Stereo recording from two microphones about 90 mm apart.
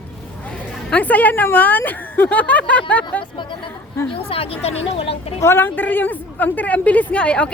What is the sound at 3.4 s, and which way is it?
Speech, 65° left (ahead or behind).